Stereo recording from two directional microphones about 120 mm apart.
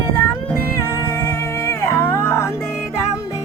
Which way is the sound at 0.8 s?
20° left (ahead or behind).